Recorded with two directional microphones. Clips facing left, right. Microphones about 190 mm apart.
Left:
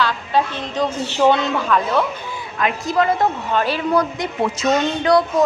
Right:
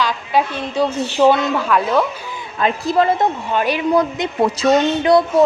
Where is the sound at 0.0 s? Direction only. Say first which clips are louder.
Right 1 dB; 10° right (ahead or behind).